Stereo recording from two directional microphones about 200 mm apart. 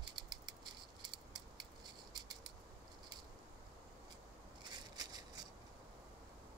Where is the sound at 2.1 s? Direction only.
20° right (ahead or behind).